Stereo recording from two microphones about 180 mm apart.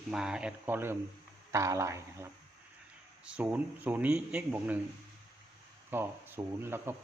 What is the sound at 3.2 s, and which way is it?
Speech, 5° right (ahead or behind).